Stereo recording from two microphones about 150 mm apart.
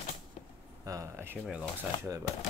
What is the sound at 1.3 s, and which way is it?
Speech, 5° right (ahead or behind).